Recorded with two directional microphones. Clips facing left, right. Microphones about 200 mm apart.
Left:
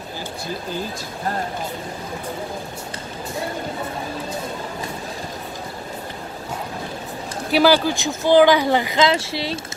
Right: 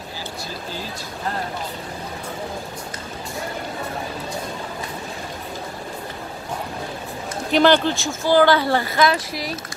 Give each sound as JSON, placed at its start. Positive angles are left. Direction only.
{"t": 7.5, "sound": "speech", "side_deg": 5}